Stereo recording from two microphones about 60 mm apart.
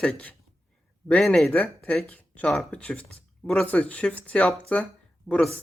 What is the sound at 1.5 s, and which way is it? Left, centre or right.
Speech, left.